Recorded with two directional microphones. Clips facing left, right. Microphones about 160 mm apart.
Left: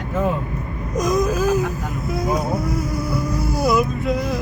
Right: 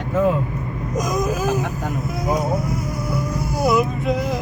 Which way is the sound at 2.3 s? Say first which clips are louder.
Right 2 dB; 20° right (ahead or behind).